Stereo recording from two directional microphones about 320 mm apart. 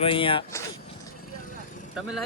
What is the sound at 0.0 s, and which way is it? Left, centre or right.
Speech, centre.